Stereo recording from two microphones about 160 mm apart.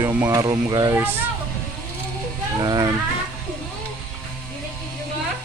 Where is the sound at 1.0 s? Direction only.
15° right (ahead or behind).